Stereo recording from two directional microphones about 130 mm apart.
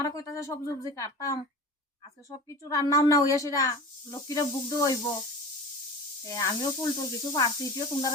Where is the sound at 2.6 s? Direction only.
25° left (ahead or behind).